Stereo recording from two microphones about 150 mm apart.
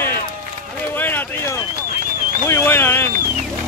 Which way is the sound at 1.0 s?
15° left (ahead or behind).